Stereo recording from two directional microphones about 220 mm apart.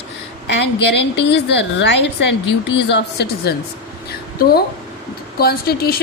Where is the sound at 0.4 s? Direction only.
50° left (ahead or behind).